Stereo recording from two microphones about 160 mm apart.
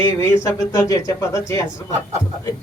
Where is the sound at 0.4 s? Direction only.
20° left (ahead or behind).